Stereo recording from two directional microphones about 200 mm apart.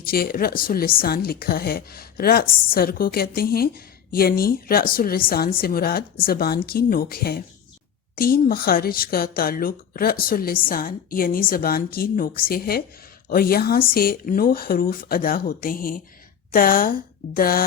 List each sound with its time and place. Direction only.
0.0 s speech: 50° left (ahead or behind)